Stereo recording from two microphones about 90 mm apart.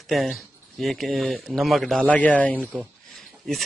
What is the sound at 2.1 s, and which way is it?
Speech, 15° left (ahead or behind).